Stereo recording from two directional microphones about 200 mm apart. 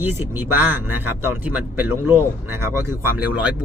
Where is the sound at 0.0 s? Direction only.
10° right (ahead or behind).